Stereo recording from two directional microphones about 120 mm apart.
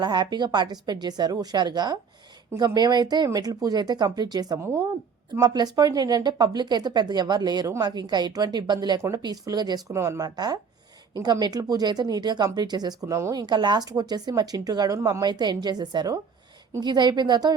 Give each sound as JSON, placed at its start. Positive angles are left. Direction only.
{"t": 0.0, "sound": "a woman's voice", "side_deg": -35}
{"t": 9.0, "sound": "a woman's voice", "side_deg": -25}